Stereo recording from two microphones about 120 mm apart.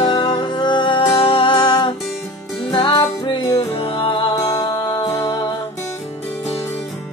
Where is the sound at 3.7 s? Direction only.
50° left (ahead or behind).